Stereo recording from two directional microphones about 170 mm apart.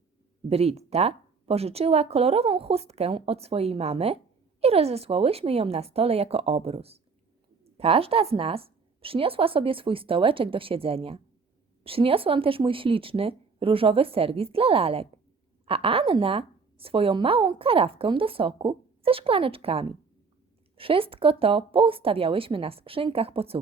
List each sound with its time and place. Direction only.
0.4 s a woman's voice: 35° right (ahead or behind)